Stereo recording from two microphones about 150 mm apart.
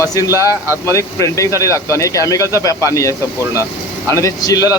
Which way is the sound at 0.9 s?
20° left (ahead or behind).